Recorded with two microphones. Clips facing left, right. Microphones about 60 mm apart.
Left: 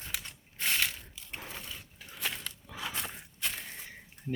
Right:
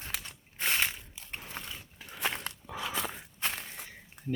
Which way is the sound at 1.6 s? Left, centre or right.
Right.